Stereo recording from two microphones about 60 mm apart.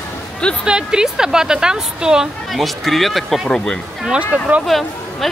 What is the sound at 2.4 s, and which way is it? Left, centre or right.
Speech, centre.